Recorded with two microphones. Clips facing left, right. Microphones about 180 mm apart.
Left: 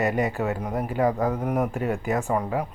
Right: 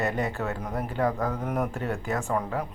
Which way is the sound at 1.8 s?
15° left (ahead or behind).